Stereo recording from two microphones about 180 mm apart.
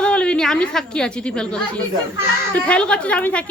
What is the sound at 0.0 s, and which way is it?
A woman's voice, 5° left (ahead or behind).